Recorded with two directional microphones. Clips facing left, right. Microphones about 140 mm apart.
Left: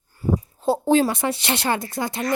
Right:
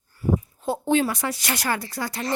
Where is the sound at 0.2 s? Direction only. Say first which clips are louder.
Even; 35° left (ahead or behind).